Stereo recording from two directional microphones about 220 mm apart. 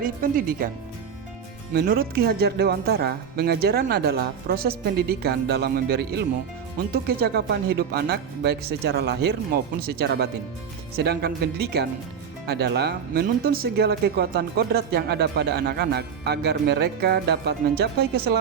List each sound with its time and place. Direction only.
0.0 s speech: 40° right (ahead or behind)
1.7 s speech: 45° right (ahead or behind)